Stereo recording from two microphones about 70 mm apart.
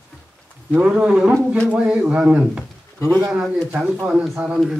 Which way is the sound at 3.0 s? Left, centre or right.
Right.